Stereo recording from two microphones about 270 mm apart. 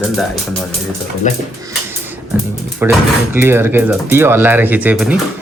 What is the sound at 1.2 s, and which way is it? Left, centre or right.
Speech, left.